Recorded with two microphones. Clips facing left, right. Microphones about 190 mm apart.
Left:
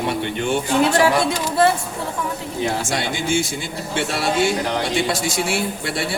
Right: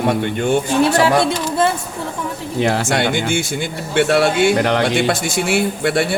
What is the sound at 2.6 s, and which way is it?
A man's voice, 75° right (ahead or behind).